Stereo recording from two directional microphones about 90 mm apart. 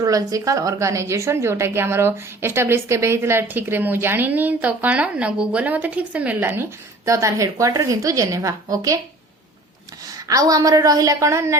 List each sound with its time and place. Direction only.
0.0 s a woman's voice: 40° right (ahead or behind)
10.1 s a woman's voice: 40° right (ahead or behind)